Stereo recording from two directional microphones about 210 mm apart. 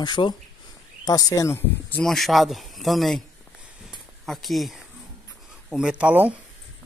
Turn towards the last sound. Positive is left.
turn(degrees=-5)  # may be behind; listen again after turning